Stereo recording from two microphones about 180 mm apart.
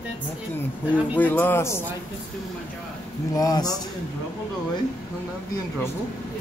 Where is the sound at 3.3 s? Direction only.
20° left (ahead or behind).